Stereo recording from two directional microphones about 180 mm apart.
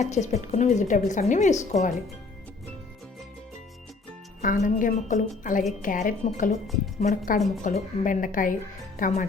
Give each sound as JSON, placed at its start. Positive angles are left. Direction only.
{"t": 0.0, "sound": "speech", "side_deg": 40}
{"t": 4.4, "sound": "speech", "side_deg": 45}
{"t": 7.3, "sound": "a woman's voice", "side_deg": 0}
{"t": 7.6, "sound": "speech", "side_deg": 45}